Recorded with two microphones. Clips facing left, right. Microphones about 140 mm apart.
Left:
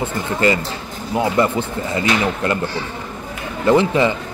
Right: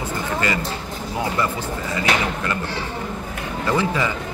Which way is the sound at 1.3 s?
25° left (ahead or behind).